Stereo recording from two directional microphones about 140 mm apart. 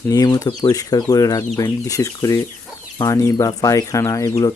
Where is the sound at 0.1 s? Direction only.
25° left (ahead or behind).